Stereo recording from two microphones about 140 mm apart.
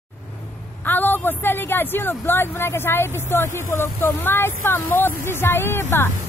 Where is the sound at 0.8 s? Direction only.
15° left (ahead or behind).